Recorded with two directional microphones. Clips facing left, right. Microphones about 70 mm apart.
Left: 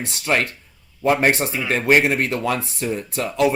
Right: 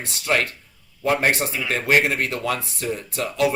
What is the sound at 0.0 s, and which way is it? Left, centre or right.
Speech, left.